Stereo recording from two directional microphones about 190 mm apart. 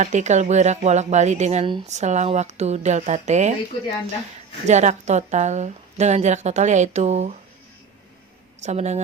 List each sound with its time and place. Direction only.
0.0 s a woman's voice: 40° right (ahead or behind)
4.6 s a woman's voice: 40° right (ahead or behind)
8.6 s a woman's voice: 35° right (ahead or behind)